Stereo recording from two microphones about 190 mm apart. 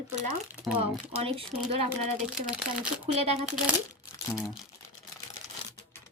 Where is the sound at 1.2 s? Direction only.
30° right (ahead or behind).